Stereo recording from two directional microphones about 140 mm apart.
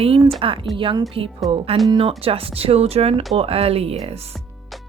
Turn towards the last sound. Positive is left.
turn(degrees=-45)  # may be behind; listen again after turning